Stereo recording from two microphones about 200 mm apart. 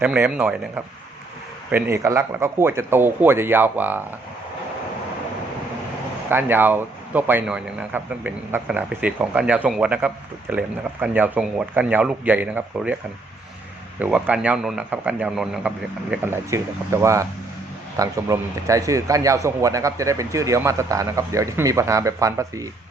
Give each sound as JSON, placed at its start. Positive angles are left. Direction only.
{"t": 0.0, "sound": "a man's voice", "side_deg": -5}
{"t": 1.7, "sound": "a man's voice", "side_deg": -15}
{"t": 6.3, "sound": "a man's voice", "side_deg": -10}
{"t": 14.0, "sound": "a man's voice", "side_deg": -5}